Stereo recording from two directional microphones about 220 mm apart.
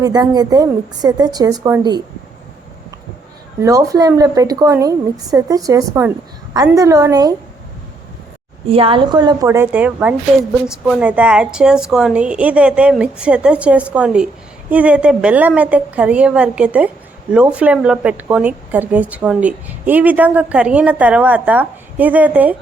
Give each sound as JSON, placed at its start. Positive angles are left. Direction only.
{"t": 0.0, "sound": "speech", "side_deg": -15}
{"t": 3.6, "sound": "speech", "side_deg": -15}
{"t": 8.7, "sound": "a woman's voice", "side_deg": -25}